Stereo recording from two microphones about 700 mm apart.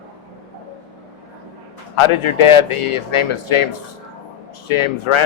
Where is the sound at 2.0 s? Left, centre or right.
Left.